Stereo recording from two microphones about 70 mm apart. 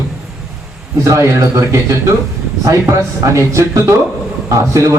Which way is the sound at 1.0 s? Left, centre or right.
Right.